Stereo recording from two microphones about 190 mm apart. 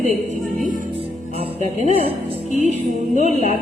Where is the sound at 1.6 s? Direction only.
35° left (ahead or behind).